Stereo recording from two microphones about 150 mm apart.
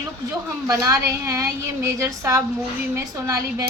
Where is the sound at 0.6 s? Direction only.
25° right (ahead or behind).